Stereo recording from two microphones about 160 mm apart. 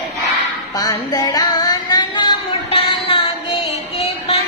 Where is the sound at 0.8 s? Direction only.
20° left (ahead or behind).